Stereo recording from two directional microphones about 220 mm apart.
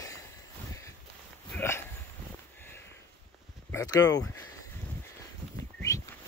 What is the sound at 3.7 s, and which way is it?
Speech, 15° left (ahead or behind).